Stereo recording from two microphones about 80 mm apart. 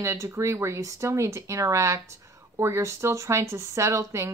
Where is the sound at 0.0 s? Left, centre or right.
Right.